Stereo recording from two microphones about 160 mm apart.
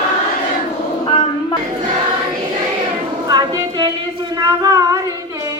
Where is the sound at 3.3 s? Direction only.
25° right (ahead or behind).